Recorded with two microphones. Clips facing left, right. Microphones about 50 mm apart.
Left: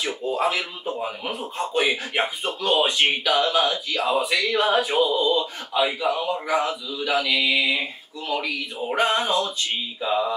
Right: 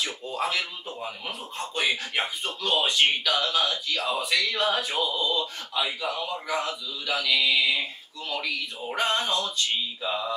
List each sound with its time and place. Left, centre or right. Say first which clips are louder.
0.0 s speech: left 6 dB; centre
9.9 s mantra: left 6 dB; centre